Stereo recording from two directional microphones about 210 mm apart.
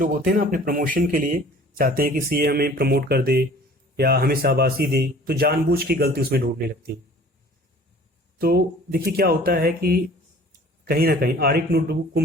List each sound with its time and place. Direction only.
0.0 s a man's voice: 40° right (ahead or behind)
8.4 s a man's voice: 45° right (ahead or behind)